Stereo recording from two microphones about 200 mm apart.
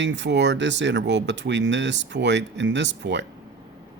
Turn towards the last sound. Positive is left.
turn(degrees=-60)  # may be behind; listen again after turning